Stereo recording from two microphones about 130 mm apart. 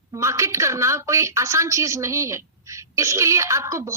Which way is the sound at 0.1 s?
20° right (ahead or behind).